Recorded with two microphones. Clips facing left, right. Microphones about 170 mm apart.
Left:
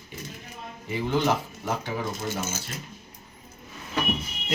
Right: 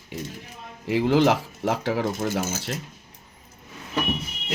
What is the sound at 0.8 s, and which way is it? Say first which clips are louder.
Speech: right 6 dB; 80° right.